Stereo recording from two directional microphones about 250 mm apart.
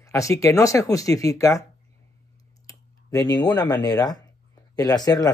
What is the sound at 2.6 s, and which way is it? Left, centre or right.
Speech, centre.